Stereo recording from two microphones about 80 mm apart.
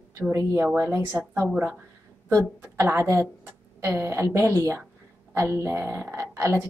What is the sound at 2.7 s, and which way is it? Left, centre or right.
A woman's voice, right.